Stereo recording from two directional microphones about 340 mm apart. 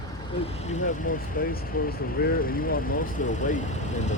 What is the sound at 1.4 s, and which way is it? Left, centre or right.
Speech, left.